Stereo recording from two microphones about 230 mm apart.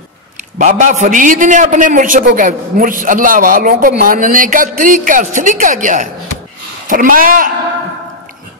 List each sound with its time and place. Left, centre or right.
0.6 s a man's voice: right